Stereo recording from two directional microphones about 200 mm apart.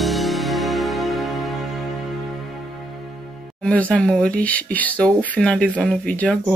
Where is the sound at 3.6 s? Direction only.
5° left (ahead or behind).